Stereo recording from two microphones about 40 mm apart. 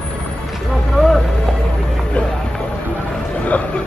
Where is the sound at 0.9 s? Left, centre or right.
Centre.